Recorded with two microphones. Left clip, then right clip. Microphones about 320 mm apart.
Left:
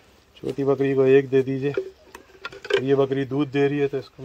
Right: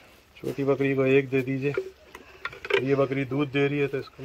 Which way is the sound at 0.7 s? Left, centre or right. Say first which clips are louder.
Left 5 dB; left.